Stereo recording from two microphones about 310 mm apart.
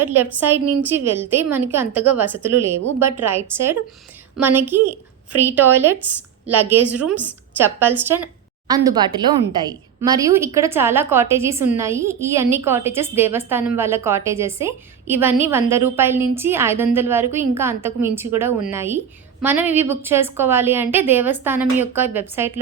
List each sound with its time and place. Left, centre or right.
0.0 s a woman's voice: centre
4.8 s a woman's voice: right
5.5 s a woman's voice: centre